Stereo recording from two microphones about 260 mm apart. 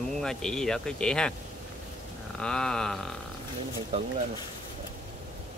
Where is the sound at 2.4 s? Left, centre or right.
Centre.